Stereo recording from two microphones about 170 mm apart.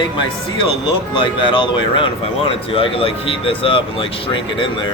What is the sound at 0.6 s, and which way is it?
Speech, 30° left (ahead or behind).